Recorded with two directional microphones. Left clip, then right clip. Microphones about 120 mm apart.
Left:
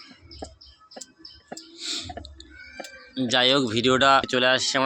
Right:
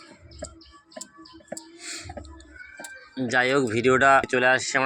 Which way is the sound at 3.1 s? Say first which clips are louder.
Left 2 dB; 25° left (ahead or behind).